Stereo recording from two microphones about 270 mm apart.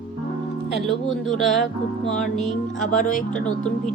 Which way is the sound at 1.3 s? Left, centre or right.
Centre.